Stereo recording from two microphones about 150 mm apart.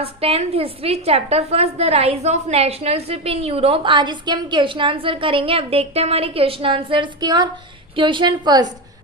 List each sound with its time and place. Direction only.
0.0 s a woman's voice: 40° right (ahead or behind)